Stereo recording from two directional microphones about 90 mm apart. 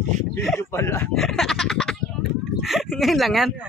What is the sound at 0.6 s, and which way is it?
Speech, 30° left (ahead or behind).